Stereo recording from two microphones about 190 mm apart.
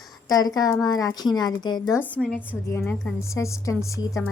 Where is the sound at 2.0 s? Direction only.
5° left (ahead or behind).